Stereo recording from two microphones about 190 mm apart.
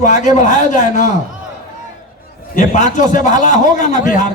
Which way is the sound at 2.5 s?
40° left (ahead or behind).